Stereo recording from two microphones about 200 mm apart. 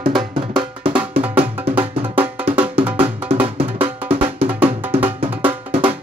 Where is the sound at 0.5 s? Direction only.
20° right (ahead or behind).